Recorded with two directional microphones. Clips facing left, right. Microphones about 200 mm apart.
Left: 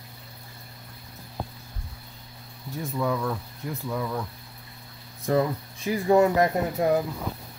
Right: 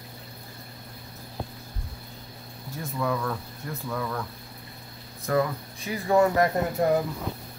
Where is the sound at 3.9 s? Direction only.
15° left (ahead or behind).